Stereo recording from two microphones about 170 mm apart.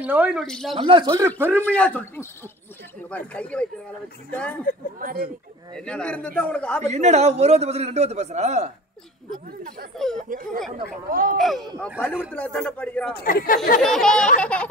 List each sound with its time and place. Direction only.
0.0 s speech: 10° right (ahead or behind)
0.7 s a man's voice: 30° right (ahead or behind)
1.1 s a man's voice: 15° right (ahead or behind)
1.6 s a man's voice: 10° left (ahead or behind)
4.9 s speech: 60° right (ahead or behind)
5.7 s a man's voice: 5° left (ahead or behind)
6.8 s a man's voice: 40° right (ahead or behind)
9.3 s speech: 55° right (ahead or behind)
9.9 s speech: 5° left (ahead or behind)
10.3 s speech: 55° right (ahead or behind)
11.3 s a man's voice: centre (ahead or behind)
13.1 s speech: 60° left (ahead or behind)
13.7 s a man's voice: 5° left (ahead or behind)